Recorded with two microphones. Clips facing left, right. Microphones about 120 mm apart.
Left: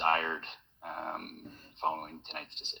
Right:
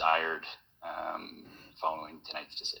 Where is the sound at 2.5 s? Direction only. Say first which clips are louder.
Right 1 dB; 40° left (ahead or behind).